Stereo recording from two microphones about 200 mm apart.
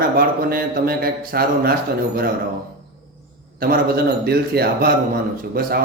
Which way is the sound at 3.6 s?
50° right (ahead or behind).